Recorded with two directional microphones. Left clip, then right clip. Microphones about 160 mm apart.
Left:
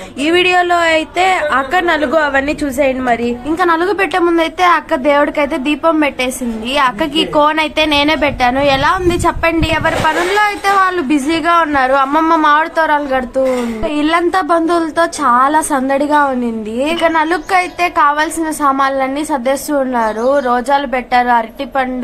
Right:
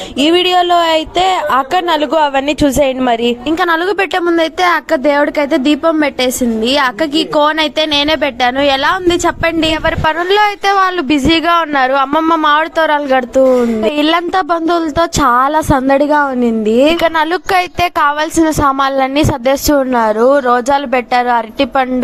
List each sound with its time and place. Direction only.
0.2 s a woman's voice: 35° right (ahead or behind); by 4.2 s 55° right (ahead or behind)
4.4 s a woman's voice: 40° right (ahead or behind)
9.8 s speech: 70° right (ahead or behind); by 12.0 s 50° right (ahead or behind)
12.1 s a woman's voice: 35° right (ahead or behind)
12.4 s a woman's voice: 45° right (ahead or behind)
14.0 s a woman's voice: 55° right (ahead or behind); by 17.0 s 35° right (ahead or behind)
17.0 s a woman's voice: 75° right (ahead or behind); by 21.8 s 45° right (ahead or behind)